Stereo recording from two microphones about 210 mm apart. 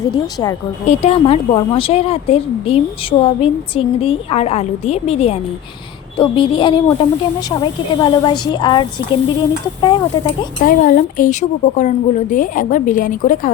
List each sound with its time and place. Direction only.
0.1 s speech: 20° left (ahead or behind)
0.9 s a woman's voice: 30° left (ahead or behind)
10.6 s a woman's voice: 40° left (ahead or behind)